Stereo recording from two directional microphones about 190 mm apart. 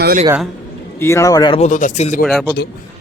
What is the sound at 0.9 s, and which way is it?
Speech, 15° left (ahead or behind).